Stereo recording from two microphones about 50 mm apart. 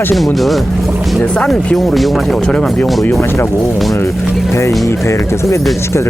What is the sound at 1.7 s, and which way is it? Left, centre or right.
Speech, centre.